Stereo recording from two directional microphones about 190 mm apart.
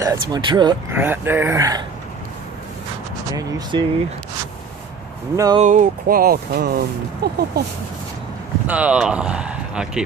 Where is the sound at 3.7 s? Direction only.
25° right (ahead or behind).